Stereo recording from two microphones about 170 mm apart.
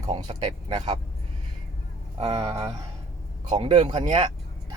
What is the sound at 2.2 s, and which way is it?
Speech, 35° right (ahead or behind).